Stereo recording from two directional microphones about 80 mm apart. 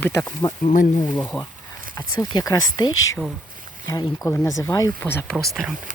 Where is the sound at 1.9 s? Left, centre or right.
Left.